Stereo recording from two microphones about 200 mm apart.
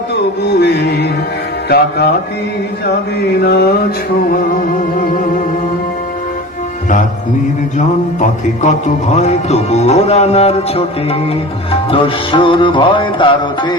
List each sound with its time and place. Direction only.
0.4 s music: 55° left (ahead or behind)
3.4 s music: 55° left (ahead or behind)
9.1 s music: 35° left (ahead or behind)